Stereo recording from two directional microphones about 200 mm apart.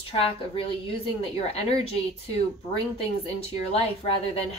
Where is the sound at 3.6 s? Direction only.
30° left (ahead or behind).